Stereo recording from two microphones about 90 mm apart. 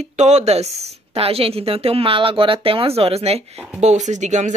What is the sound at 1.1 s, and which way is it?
Speech, 90° right.